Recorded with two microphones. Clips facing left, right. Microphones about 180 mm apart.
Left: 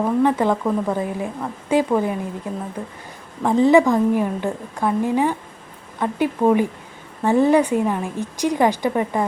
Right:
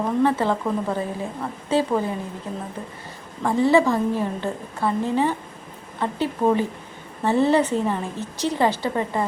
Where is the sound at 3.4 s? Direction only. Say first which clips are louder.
Left 4 dB; 15° left (ahead or behind).